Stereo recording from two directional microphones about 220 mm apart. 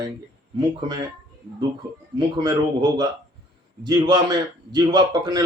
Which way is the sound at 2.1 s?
20° right (ahead or behind).